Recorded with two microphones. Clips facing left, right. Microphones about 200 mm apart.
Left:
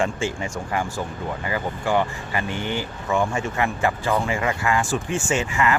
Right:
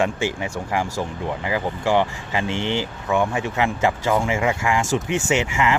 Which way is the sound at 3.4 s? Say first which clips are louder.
Right 2 dB; 90° right.